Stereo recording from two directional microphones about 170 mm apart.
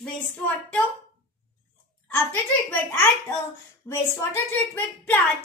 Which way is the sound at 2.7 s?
10° left (ahead or behind).